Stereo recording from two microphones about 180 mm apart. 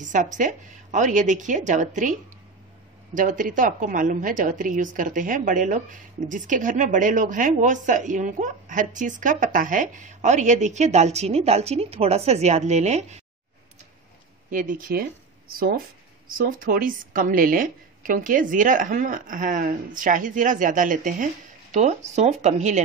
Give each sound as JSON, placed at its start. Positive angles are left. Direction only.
{"t": 0.0, "sound": "a woman's voice", "side_deg": -45}
{"t": 3.2, "sound": "a woman's voice", "side_deg": -50}
{"t": 14.5, "sound": "a woman's voice", "side_deg": -50}
{"t": 16.3, "sound": "a woman's voice", "side_deg": -50}